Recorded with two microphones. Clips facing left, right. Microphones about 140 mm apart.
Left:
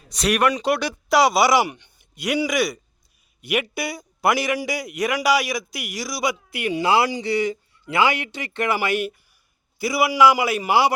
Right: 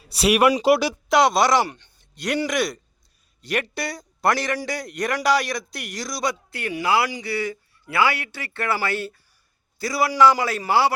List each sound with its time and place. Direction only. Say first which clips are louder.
0.1 s a man's voice: right 3 dB; 5° right (ahead or behind); by 6.7 s 15° left (ahead or behind)
6.7 s a man's voice: left 2 dB; 25° left (ahead or behind)